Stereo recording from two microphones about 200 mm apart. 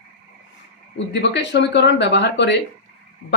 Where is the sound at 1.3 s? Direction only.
60° left (ahead or behind).